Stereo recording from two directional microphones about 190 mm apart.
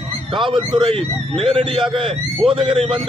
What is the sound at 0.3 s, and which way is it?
A man's voice, 25° right (ahead or behind).